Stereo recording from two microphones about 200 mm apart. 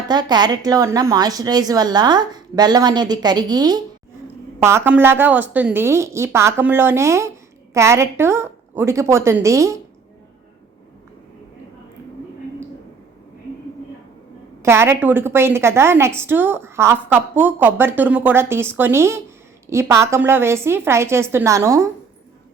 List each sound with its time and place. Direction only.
0.1 s a woman's voice: 20° right (ahead or behind)
14.6 s a woman's voice: 10° right (ahead or behind)